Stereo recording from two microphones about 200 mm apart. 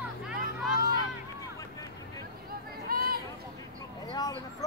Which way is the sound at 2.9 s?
50° right (ahead or behind).